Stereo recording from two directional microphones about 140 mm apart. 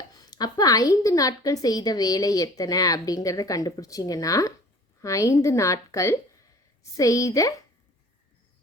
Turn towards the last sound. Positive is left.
turn(degrees=25)  # may be behind; listen again after turning